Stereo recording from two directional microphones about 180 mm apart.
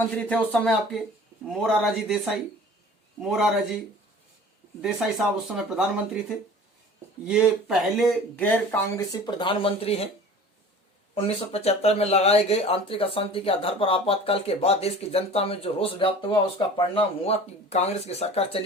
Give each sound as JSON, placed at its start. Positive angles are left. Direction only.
{"t": 0.3, "sound": "speech", "side_deg": 5}
{"t": 4.8, "sound": "speech", "side_deg": 0}
{"t": 7.3, "sound": "speech", "side_deg": -5}
{"t": 11.1, "sound": "speech", "side_deg": 35}